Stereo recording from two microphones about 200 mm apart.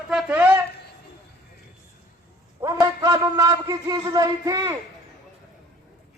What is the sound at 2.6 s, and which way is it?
A man's voice, 15° right (ahead or behind).